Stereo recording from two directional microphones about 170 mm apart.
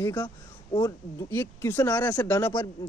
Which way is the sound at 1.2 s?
15° left (ahead or behind).